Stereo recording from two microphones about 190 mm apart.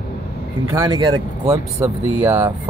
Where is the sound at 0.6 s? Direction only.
20° right (ahead or behind).